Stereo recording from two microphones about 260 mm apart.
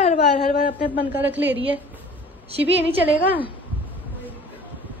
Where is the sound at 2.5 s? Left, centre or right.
Right.